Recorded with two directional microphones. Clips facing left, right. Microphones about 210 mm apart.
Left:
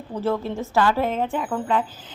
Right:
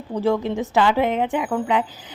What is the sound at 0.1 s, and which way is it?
Speech, 15° right (ahead or behind).